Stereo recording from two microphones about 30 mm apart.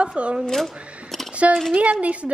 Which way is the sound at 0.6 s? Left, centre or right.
Centre.